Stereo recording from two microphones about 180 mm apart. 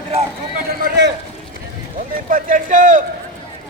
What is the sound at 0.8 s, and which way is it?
Speech, 70° right (ahead or behind).